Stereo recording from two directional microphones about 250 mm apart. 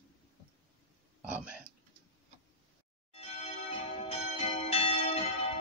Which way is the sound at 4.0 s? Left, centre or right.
Left.